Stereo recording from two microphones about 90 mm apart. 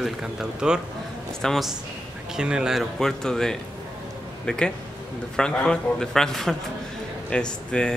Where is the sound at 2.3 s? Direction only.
10° right (ahead or behind).